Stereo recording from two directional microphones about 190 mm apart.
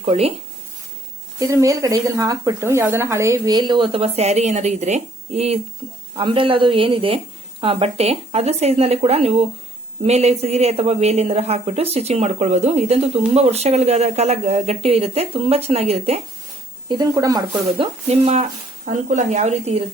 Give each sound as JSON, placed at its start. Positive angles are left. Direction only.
{"t": 0.0, "sound": "a woman's voice", "side_deg": -35}
{"t": 1.4, "sound": "a woman's voice", "side_deg": -15}
{"t": 16.9, "sound": "speech", "side_deg": -20}
{"t": 18.1, "sound": "a woman's voice", "side_deg": -35}